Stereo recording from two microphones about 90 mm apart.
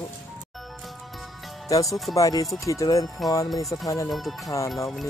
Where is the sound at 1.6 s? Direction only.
40° left (ahead or behind).